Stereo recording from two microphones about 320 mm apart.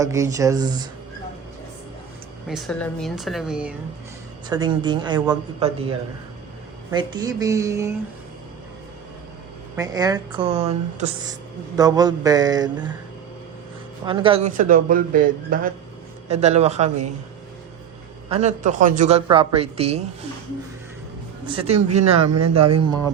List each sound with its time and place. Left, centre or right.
0.0 s a woman's voice: centre
2.5 s a woman's voice: centre
4.4 s a woman's voice: centre
6.9 s a woman's voice: centre
9.7 s a woman's voice: centre
11.8 s a woman's voice: centre
14.0 s speech: centre
18.3 s speech: right
21.4 s speech: centre
22.3 s speech: right
22.8 s a woman's voice: centre